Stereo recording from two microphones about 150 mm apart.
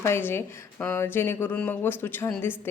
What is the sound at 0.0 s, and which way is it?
Speech, 15° left (ahead or behind).